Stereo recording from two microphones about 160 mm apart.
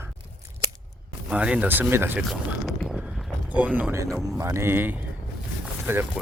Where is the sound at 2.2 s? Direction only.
Centre (ahead or behind); by 4.1 s 15° right (ahead or behind).